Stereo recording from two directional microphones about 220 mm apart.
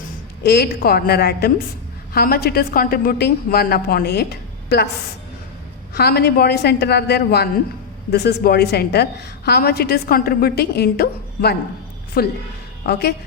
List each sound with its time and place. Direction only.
0.4 s a woman's voice: 45° left (ahead or behind)
5.9 s a woman's voice: 45° left (ahead or behind)